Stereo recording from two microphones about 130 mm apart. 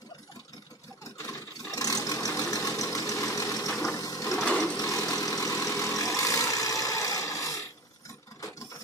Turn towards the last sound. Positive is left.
turn(degrees=25)  # may be behind; listen again after turning